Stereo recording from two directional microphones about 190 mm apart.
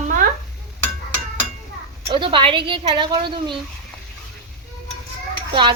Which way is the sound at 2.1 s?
25° right (ahead or behind).